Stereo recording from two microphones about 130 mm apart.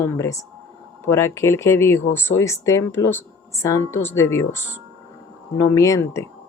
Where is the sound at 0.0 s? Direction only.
25° left (ahead or behind).